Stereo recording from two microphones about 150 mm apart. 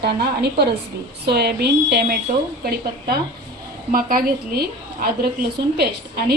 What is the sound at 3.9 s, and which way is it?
A woman's voice, 75° right (ahead or behind).